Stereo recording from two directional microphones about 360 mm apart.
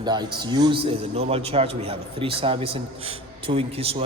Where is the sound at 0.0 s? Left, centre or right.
Centre.